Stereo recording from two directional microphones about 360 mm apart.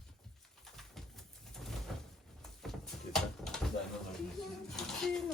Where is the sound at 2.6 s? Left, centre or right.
Centre.